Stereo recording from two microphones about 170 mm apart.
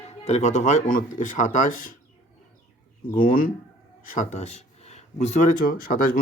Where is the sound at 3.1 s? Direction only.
55° left (ahead or behind).